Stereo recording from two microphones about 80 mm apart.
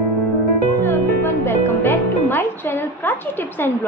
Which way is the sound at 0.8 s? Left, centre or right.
Left.